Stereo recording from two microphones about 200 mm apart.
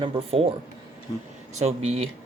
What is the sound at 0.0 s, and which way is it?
Speech, 30° right (ahead or behind).